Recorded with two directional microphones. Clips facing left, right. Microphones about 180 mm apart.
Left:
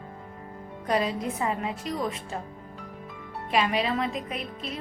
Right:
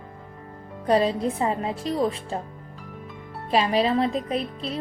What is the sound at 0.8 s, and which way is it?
Speech, 30° right (ahead or behind).